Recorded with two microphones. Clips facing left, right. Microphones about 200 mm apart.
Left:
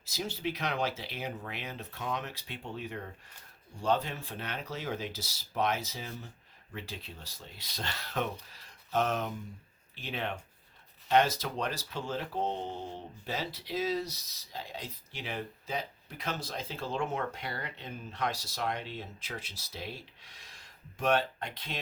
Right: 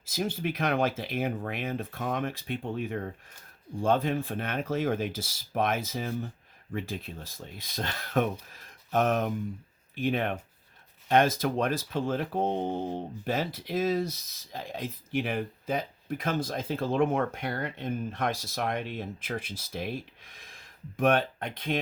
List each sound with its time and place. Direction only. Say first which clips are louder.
0.0 s speech: right 4 dB; 50° right (ahead or behind)